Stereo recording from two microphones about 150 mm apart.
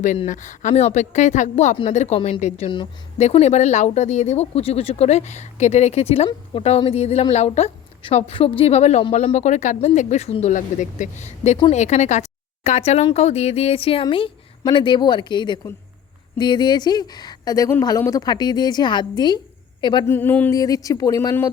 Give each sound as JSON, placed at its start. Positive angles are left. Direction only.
{"t": 0.3, "sound": "speech", "side_deg": 55}
{"t": 20.1, "sound": "speech", "side_deg": 15}
{"t": 20.5, "sound": "speech", "side_deg": 25}